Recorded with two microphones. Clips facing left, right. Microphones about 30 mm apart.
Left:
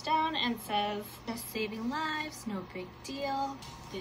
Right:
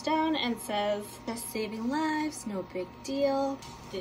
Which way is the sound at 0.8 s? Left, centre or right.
Left.